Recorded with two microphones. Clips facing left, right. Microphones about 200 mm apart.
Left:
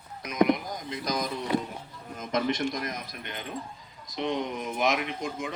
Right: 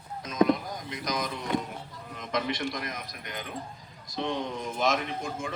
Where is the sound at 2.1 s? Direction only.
45° left (ahead or behind).